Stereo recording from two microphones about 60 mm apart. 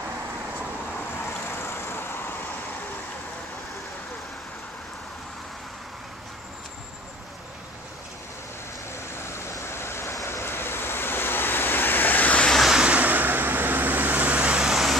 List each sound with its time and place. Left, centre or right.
1.2 s vehicle: left
8.9 s vehicle: left
10.2 s waves: left
12.6 s waves: centre
12.9 s vehicle: right
14.6 s vehicle: centre